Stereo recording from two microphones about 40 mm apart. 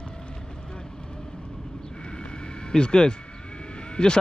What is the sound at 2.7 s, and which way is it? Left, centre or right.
Speech, centre.